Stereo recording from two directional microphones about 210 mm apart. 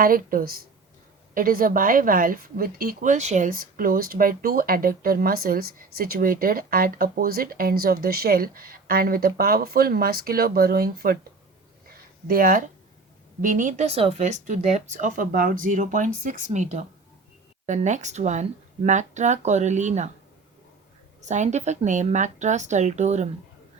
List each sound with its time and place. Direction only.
0.0 s a woman's voice: 45° right (ahead or behind)
12.3 s a woman's voice: 45° right (ahead or behind)
21.2 s speech: 35° right (ahead or behind)